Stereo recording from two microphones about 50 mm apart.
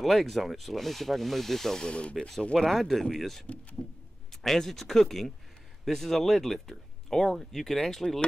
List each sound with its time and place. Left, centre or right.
0.0 s rub: centre
1.9 s speech: left
2.5 s rub: centre
3.8 s a sound: left
4.3 s speech: centre